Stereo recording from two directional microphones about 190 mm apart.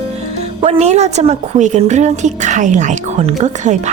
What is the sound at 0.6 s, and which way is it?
Speech, 35° right (ahead or behind).